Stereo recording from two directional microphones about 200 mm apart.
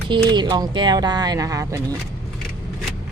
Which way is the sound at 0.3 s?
20° right (ahead or behind).